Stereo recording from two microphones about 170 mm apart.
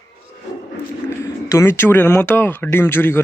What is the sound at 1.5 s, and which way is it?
Speech, 15° left (ahead or behind).